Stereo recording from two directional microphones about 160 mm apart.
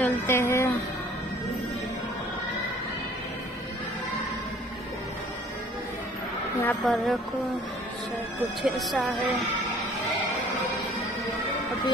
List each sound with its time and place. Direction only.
0.0 s a sound: 15° left (ahead or behind)
6.8 s a woman's voice: centre (ahead or behind)
8.6 s a woman's voice: centre (ahead or behind)